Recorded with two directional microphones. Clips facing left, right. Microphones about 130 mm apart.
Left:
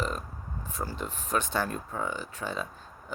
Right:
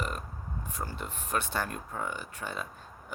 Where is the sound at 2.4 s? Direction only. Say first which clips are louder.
Left 4 dB; 45° left (ahead or behind).